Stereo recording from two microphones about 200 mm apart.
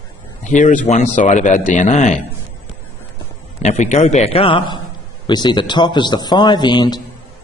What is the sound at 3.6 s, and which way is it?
A man's voice, 35° left (ahead or behind).